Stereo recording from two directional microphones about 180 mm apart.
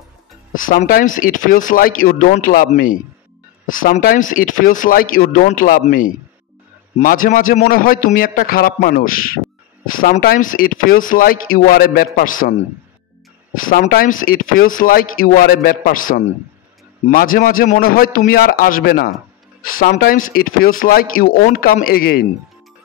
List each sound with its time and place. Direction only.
0.6 s speech: 50° left (ahead or behind)
13.6 s speech: 50° left (ahead or behind)